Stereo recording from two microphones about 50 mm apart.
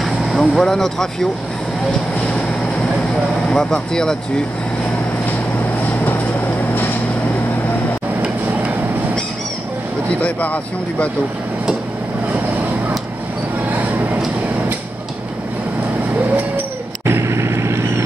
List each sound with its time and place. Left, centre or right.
0.0 s vehicle: centre
3.4 s speech: centre
10.2 s speech: left
17.0 s vehicle: right